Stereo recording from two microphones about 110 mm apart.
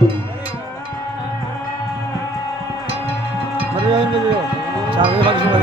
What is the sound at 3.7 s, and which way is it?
Music, 50° right (ahead or behind).